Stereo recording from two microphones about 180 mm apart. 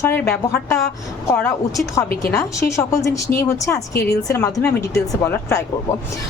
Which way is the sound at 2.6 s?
15° left (ahead or behind).